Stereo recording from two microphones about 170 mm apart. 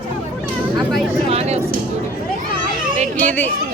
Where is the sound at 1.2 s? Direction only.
40° right (ahead or behind).